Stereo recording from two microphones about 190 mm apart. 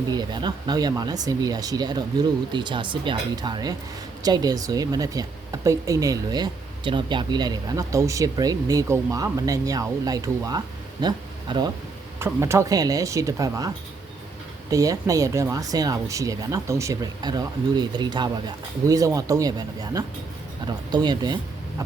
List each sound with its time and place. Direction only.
0.1 s speech: 20° right (ahead or behind)
14.7 s speech: 15° right (ahead or behind)